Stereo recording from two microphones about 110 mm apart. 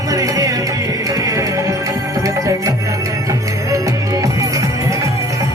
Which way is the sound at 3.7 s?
30° right (ahead or behind).